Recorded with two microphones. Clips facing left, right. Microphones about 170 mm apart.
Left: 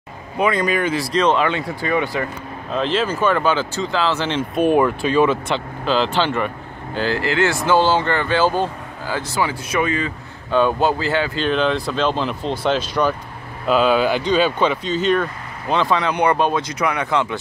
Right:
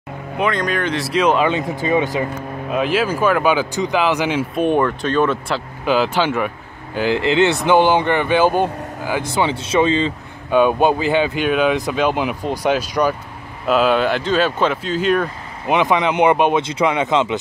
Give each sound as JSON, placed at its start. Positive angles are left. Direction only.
{"t": 0.4, "sound": "speech", "side_deg": 5}
{"t": 4.6, "sound": "speech", "side_deg": 5}
{"t": 5.9, "sound": "speech", "side_deg": -10}
{"t": 10.5, "sound": "speech", "side_deg": -15}
{"t": 13.7, "sound": "speech", "side_deg": 0}